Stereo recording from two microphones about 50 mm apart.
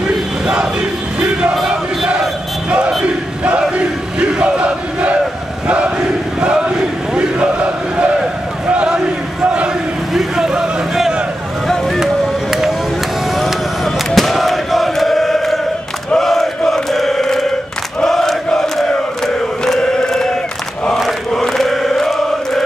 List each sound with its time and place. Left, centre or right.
1.5 s chant: centre
3.7 s crowd: right
8.6 s battle cry: right
10.1 s a sound: centre
11.6 s boat: centre
14.1 s chant: centre